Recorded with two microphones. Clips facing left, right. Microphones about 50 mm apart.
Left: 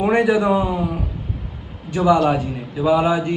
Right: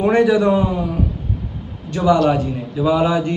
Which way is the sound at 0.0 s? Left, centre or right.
Centre.